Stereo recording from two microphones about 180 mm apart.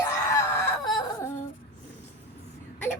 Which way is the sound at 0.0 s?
15° left (ahead or behind).